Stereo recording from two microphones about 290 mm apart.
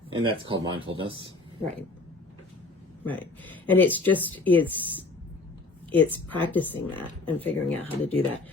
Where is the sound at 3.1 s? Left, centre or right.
Centre.